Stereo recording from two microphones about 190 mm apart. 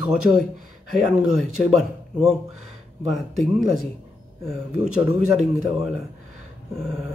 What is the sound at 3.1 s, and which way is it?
Speech, centre (ahead or behind).